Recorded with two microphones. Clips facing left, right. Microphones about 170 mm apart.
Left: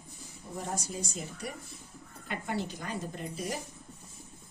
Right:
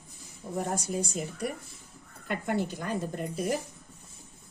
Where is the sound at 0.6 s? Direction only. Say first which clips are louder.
Right 6 dB; 55° right (ahead or behind).